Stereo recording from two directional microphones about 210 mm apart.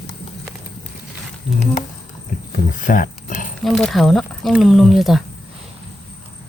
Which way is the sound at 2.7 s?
40° left (ahead or behind).